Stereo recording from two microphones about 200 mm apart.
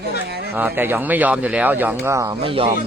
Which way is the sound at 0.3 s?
55° right (ahead or behind).